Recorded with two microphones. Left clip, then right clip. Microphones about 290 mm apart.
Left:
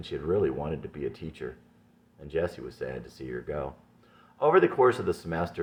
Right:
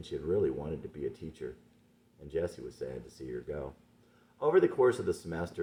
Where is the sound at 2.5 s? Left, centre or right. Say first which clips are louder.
Left 4 dB; left.